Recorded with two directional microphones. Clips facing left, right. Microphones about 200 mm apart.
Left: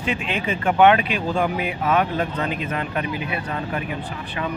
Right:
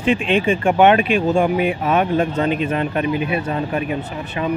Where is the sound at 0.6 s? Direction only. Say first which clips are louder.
Even; 25° right (ahead or behind).